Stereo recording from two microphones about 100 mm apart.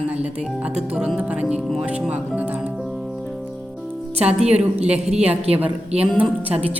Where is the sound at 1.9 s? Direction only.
15° right (ahead or behind).